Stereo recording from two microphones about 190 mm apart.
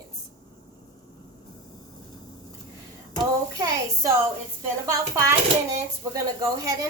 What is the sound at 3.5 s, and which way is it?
A child's voice, 20° right (ahead or behind).